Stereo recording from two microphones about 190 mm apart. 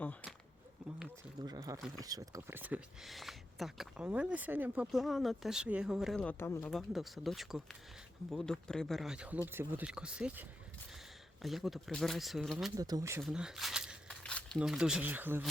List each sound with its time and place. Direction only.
0.0 s a sound: 10° left (ahead or behind)
1.4 s a sound: 20° right (ahead or behind)
2.0 s speech: 20° right (ahead or behind); by 6.7 s 10° left (ahead or behind)
6.7 s speech: centre (ahead or behind)
11.4 s speech: centre (ahead or behind)
12.7 s speech: 20° right (ahead or behind)
13.2 s speech: 5° right (ahead or behind)